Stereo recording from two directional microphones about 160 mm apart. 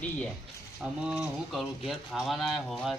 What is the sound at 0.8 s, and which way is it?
Speech, 5° right (ahead or behind).